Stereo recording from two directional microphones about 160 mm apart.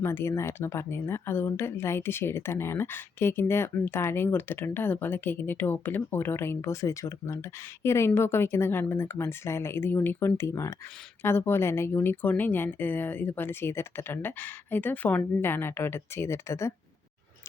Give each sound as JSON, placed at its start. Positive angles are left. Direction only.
{"t": 0.0, "sound": "speech", "side_deg": 15}